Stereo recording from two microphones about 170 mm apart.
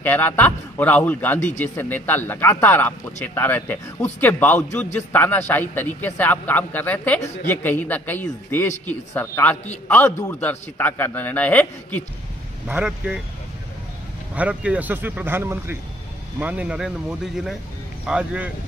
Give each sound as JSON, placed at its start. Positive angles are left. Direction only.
{"t": 0.0, "sound": "a man's voice", "side_deg": 10}
{"t": 12.6, "sound": "speech", "side_deg": -5}
{"t": 14.3, "sound": "speech", "side_deg": -10}
{"t": 18.0, "sound": "speech", "side_deg": -5}